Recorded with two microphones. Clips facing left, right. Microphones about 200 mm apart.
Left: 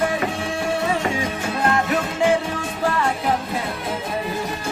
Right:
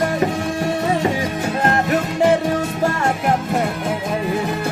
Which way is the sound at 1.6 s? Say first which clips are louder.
Right 2 dB; 40° right (ahead or behind).